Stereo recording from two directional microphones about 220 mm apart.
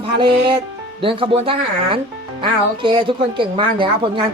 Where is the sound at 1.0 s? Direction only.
25° right (ahead or behind).